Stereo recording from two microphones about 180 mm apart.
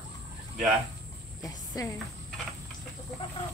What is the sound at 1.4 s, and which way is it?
Speech, 20° left (ahead or behind).